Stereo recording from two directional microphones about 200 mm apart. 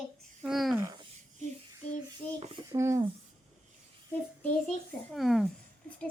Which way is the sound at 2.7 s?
15° right (ahead or behind).